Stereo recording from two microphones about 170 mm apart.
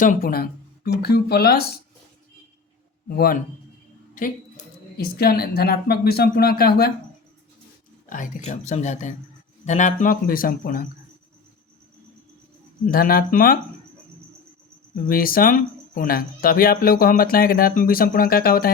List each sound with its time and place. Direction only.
0.0 s speech: 55° left (ahead or behind)
3.1 s speech: 65° left (ahead or behind)
4.1 s a woman's voice: 50° left (ahead or behind)
8.1 s speech: 50° left (ahead or behind)
12.9 s speech: 60° left (ahead or behind)
15.0 s speech: 60° left (ahead or behind)